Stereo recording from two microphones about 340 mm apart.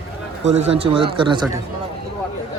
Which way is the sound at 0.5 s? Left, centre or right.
Centre.